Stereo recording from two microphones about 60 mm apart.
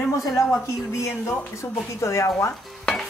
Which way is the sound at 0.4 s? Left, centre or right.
Left.